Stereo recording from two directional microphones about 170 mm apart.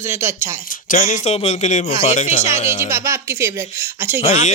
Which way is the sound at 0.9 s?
45° left (ahead or behind).